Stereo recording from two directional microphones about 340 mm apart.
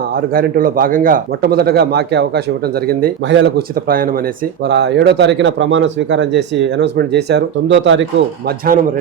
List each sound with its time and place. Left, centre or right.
0.2 s speech: right